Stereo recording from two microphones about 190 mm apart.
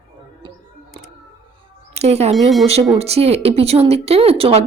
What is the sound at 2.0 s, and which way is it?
Speech, 35° right (ahead or behind).